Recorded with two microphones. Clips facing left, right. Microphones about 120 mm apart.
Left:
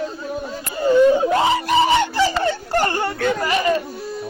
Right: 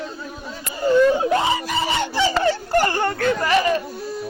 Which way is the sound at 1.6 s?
70° left (ahead or behind).